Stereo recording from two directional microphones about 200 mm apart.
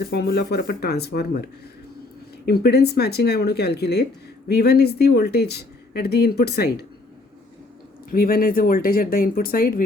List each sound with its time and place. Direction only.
0.0 s speech: 50° left (ahead or behind)
2.5 s speech: 55° left (ahead or behind)
8.1 s speech: 45° left (ahead or behind)